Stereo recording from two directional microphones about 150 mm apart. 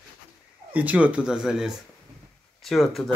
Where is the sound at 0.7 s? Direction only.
10° right (ahead or behind).